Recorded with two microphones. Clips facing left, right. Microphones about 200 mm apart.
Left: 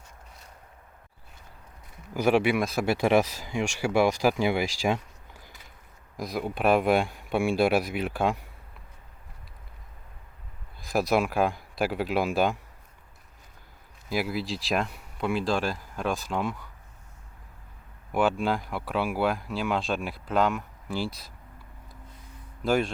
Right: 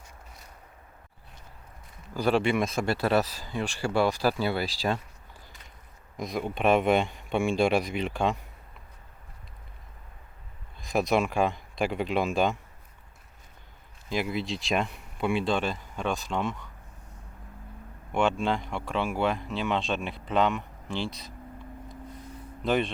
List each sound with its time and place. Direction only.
2.1 s speech: 10° left (ahead or behind)
6.1 s speech: centre (ahead or behind)
10.8 s speech: centre (ahead or behind)
14.1 s speech: 5° left (ahead or behind)
18.1 s speech: 5° left (ahead or behind)
22.6 s speech: centre (ahead or behind)